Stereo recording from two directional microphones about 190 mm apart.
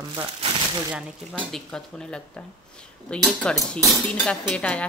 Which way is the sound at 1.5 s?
5° left (ahead or behind).